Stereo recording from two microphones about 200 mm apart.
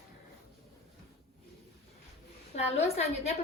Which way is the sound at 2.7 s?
30° left (ahead or behind).